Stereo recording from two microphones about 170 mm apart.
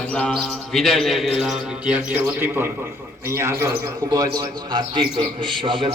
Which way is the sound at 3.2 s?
15° right (ahead or behind).